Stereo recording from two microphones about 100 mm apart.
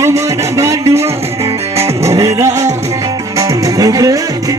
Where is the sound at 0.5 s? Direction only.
30° right (ahead or behind).